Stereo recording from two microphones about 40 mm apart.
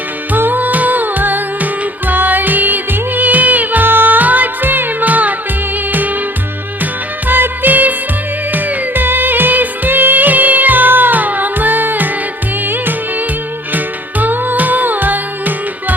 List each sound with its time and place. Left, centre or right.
0.3 s music: right
7.3 s music: right